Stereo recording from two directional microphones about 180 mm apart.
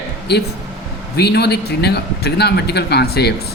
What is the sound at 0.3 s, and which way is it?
A man's voice, 65° left (ahead or behind).